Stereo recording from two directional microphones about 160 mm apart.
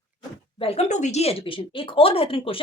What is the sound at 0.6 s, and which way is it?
Speech, 40° left (ahead or behind).